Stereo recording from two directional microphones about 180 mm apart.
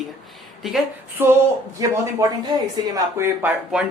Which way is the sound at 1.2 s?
15° right (ahead or behind).